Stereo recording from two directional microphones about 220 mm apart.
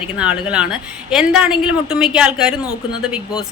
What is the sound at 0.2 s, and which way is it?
Speech, 5° right (ahead or behind).